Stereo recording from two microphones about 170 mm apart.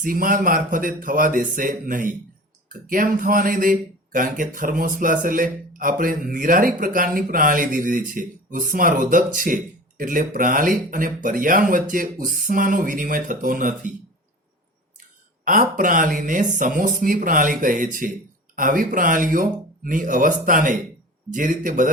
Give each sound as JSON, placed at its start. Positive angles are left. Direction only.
{"t": 0.0, "sound": "speech", "side_deg": -55}
{"t": 15.4, "sound": "speech", "side_deg": -50}